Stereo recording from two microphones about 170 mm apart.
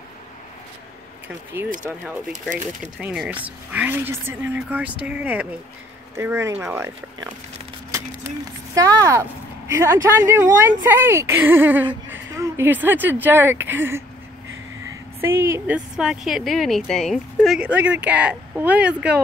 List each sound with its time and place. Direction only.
2.8 s speech: 5° right (ahead or behind)
8.7 s speech: 20° right (ahead or behind)
15.1 s speech: 15° right (ahead or behind)